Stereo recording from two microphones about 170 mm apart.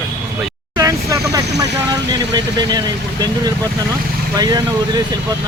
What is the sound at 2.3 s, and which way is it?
Speech, 25° right (ahead or behind).